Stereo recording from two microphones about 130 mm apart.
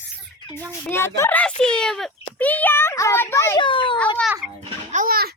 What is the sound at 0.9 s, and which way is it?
A child's voice, 20° left (ahead or behind).